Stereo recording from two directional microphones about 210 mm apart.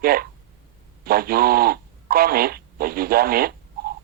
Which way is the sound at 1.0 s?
45° right (ahead or behind).